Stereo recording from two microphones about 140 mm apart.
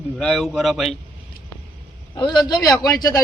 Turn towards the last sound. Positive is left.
turn(degrees=25)  # may be behind; listen again after turning